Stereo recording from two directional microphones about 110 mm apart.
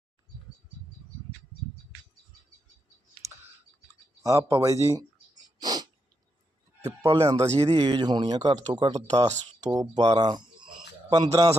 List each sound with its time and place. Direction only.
4.2 s speech: 30° right (ahead or behind)
5.5 s a sound: 40° right (ahead or behind)
6.8 s speech: 30° right (ahead or behind)
7.5 s speech: 65° right (ahead or behind)
7.8 s speech: 40° right (ahead or behind)